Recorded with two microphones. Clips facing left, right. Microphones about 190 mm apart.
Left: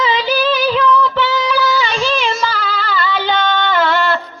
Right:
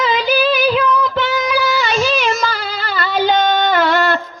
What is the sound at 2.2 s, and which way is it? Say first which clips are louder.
Music: even; 45° right (ahead or behind).